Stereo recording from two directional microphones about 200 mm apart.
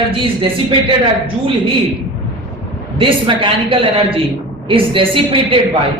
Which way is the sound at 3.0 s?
25° right (ahead or behind).